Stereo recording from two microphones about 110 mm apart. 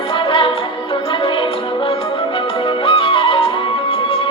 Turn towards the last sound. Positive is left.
turn(degrees=55)  # may be behind; listen again after turning